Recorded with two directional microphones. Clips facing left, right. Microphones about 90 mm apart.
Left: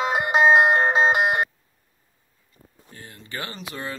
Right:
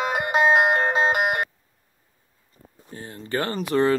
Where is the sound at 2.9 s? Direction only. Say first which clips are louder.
Right 8 dB; 30° right (ahead or behind).